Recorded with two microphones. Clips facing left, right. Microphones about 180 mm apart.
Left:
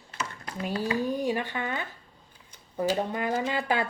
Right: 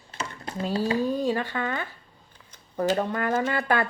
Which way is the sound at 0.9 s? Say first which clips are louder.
Right 1 dB; 15° left (ahead or behind).